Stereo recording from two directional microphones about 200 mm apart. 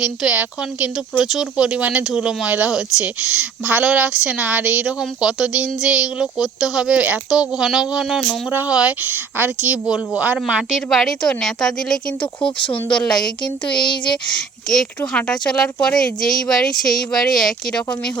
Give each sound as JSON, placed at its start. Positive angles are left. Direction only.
{"t": 0.0, "sound": "speech", "side_deg": -5}
{"t": 12.2, "sound": "speech", "side_deg": 25}
{"t": 12.9, "sound": "speech", "side_deg": 5}
{"t": 13.7, "sound": "speech", "side_deg": 20}
{"t": 14.3, "sound": "speech", "side_deg": 5}